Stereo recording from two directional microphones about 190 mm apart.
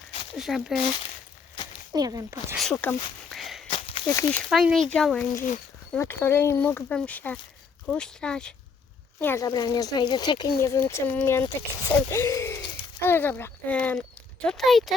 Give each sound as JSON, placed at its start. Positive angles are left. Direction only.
{"t": 0.3, "sound": "speech", "side_deg": 0}
{"t": 1.9, "sound": "speech", "side_deg": -20}
{"t": 2.6, "sound": "speech", "side_deg": 5}
{"t": 3.7, "sound": "a sound", "side_deg": 30}
{"t": 4.0, "sound": "speech", "side_deg": 15}
{"t": 9.2, "sound": "speech", "side_deg": 15}